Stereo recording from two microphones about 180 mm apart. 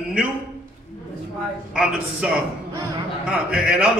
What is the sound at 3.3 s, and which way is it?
Speech, 5° right (ahead or behind).